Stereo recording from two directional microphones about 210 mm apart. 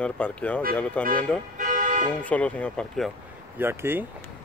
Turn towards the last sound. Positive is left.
turn(degrees=-10)  # may be behind; listen again after turning